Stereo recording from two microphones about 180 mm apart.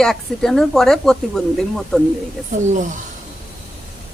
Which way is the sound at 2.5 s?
45° right (ahead or behind).